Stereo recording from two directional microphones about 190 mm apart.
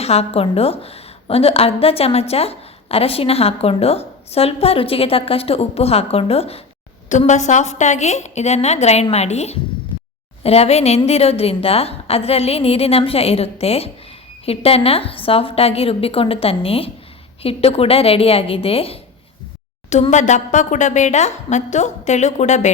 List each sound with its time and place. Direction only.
0.0 s a woman's voice: 35° left (ahead or behind)